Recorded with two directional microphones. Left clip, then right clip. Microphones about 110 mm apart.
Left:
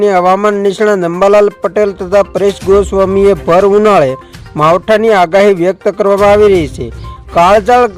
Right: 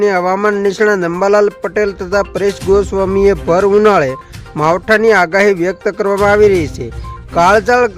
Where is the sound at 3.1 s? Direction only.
20° left (ahead or behind).